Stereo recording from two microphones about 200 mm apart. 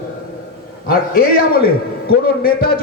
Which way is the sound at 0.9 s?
45° left (ahead or behind).